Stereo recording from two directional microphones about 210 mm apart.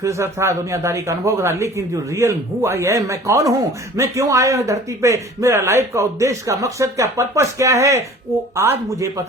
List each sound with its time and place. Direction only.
0.0 s a man's voice: 15° right (ahead or behind)